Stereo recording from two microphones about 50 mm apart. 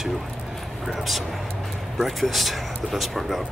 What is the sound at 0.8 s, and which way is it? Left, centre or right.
Speech, centre.